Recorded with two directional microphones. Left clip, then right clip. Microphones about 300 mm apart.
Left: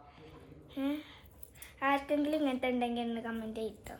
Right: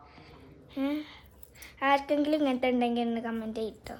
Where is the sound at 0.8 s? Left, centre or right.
Right.